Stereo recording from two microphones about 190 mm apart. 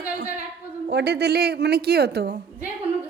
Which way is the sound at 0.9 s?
60° right (ahead or behind).